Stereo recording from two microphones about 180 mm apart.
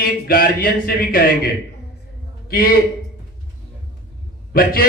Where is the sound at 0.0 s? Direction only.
55° left (ahead or behind).